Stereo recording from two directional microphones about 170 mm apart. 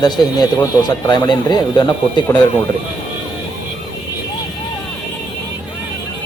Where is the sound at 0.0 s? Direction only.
25° left (ahead or behind).